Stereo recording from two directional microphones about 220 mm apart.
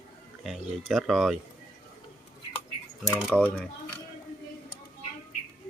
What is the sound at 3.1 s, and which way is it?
Speech, 5° left (ahead or behind).